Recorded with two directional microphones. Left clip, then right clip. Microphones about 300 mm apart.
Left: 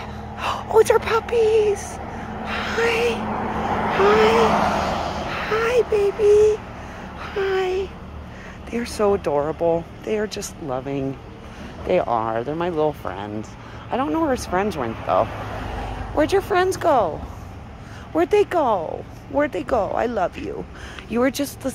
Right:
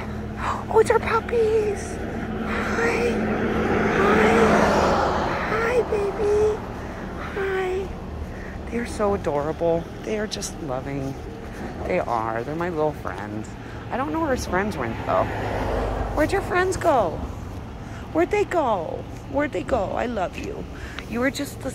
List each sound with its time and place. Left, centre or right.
0.0 s a sound: left
2.4 s vehicle: left
2.8 s speech: left
3.3 s vehicle: centre
4.5 s vehicle: centre
5.3 s vehicle: left
7.2 s speech: centre
18.1 s speech: left